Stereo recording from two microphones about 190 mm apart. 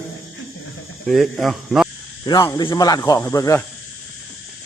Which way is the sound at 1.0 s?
Centre (ahead or behind).